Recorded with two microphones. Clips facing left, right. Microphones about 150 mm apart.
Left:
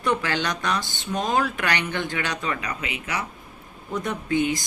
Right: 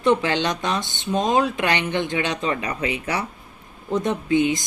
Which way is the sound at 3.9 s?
20° right (ahead or behind).